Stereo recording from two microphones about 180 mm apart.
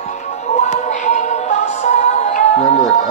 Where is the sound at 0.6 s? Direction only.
40° left (ahead or behind).